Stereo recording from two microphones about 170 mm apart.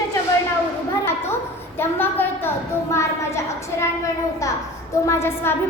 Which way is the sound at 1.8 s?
10° left (ahead or behind).